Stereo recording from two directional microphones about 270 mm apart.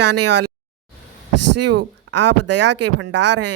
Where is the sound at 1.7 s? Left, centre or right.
Right.